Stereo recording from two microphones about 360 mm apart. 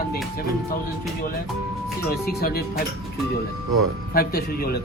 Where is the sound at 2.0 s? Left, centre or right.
Left.